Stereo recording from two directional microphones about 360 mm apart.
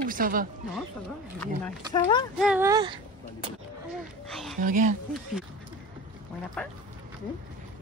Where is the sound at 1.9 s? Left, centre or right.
Centre.